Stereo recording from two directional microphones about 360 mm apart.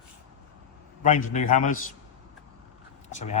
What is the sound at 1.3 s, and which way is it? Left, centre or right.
Speech, left.